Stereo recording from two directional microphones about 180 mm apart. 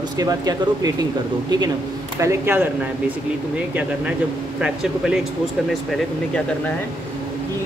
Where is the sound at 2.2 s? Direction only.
15° right (ahead or behind).